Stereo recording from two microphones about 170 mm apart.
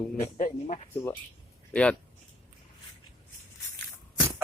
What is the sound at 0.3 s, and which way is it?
Speech, 50° left (ahead or behind).